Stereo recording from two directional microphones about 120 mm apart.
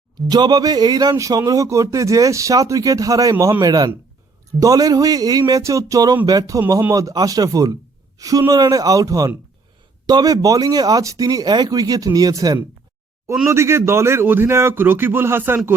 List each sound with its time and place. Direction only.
0.3 s speech: 35° right (ahead or behind)
3.3 s speech: 20° right (ahead or behind)
3.6 s speech: 35° right (ahead or behind)